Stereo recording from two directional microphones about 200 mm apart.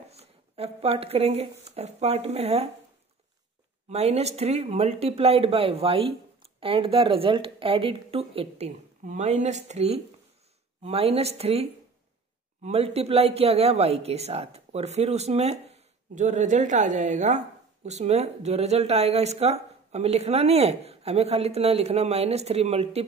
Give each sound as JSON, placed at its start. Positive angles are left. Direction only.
{"t": 0.1, "sound": "speech", "side_deg": -30}
{"t": 3.9, "sound": "a woman's voice", "side_deg": -30}